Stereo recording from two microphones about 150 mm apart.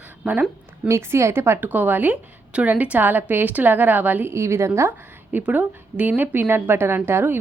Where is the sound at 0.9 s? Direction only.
15° right (ahead or behind).